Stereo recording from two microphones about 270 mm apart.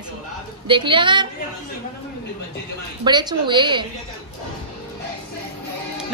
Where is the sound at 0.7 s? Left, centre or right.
Centre.